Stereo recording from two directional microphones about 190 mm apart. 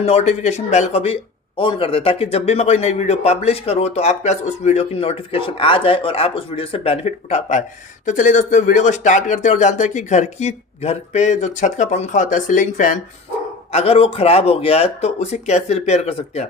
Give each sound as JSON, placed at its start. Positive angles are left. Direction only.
{"t": 0.0, "sound": "speech", "side_deg": 35}
{"t": 13.7, "sound": "speech", "side_deg": 30}